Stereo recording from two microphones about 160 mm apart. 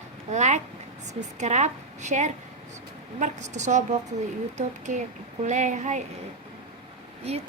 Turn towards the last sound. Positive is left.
turn(degrees=-40)  # may be behind; listen again after turning